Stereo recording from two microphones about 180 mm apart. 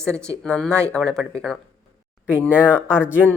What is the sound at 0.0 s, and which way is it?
Speech, 5° left (ahead or behind).